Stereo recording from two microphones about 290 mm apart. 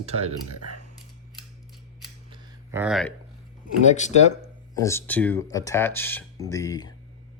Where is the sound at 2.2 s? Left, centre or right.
Centre.